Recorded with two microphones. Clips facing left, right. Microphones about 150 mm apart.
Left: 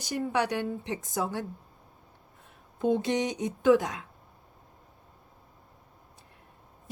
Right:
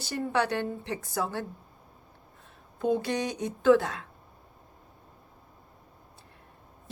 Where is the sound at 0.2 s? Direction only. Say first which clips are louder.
Right 1 dB; 10° left (ahead or behind).